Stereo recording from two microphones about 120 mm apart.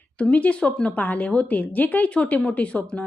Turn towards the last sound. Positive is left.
turn(degrees=10)  # may be behind; listen again after turning